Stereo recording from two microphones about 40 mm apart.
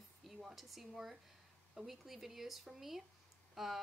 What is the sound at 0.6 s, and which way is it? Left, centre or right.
A woman's voice, centre.